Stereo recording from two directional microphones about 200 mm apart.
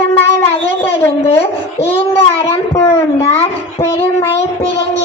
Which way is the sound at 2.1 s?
15° left (ahead or behind).